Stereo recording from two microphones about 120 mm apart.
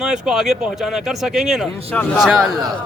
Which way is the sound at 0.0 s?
5° right (ahead or behind).